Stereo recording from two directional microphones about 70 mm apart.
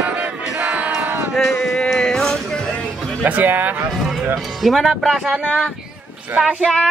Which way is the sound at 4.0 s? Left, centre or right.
Centre.